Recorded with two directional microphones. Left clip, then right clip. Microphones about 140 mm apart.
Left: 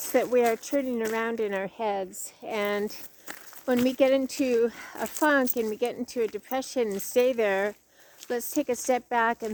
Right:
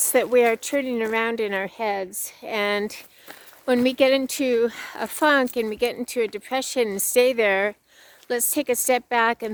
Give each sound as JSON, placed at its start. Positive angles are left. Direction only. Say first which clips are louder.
{"t": 0.0, "sound": "speech", "louder": "right 5 dB", "side_deg": -30}